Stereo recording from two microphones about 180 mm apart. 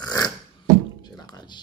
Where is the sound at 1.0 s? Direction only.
20° left (ahead or behind).